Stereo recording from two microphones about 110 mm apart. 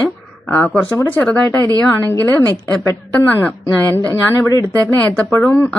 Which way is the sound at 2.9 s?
20° left (ahead or behind).